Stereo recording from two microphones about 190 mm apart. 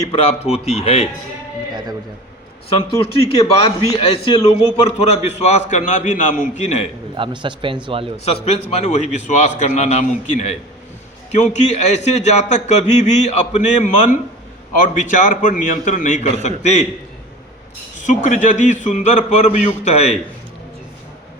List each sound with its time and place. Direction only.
0.1 s a man's voice: 35° left (ahead or behind)
2.7 s a man's voice: 30° left (ahead or behind)
7.2 s speech: 25° right (ahead or behind)
8.1 s a man's voice: 35° left (ahead or behind)
18.0 s a man's voice: 40° left (ahead or behind)